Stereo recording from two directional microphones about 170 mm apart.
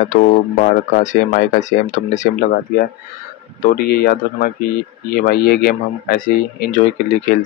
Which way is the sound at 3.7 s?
65° left (ahead or behind).